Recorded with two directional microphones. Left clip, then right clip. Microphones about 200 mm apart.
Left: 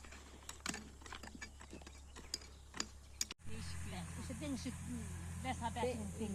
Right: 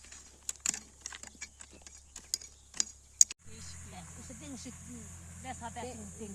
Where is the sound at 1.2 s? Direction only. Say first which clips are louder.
Right 4 dB; 10° right (ahead or behind).